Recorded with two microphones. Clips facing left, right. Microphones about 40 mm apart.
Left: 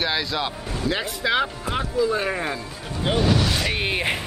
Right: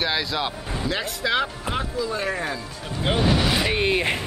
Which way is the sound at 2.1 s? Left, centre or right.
Left.